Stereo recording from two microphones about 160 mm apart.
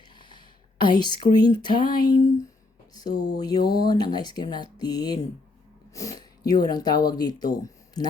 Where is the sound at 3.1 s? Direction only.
90° left.